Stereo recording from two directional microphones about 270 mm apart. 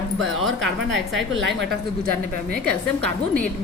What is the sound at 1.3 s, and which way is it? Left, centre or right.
Speech, right.